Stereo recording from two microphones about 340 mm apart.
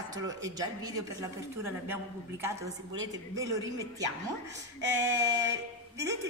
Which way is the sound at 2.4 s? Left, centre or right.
Centre.